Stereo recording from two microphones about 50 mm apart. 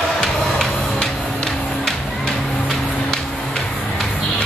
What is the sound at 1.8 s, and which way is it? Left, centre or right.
Music, centre.